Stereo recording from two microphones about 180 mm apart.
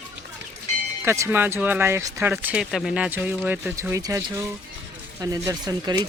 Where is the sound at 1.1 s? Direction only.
10° right (ahead or behind).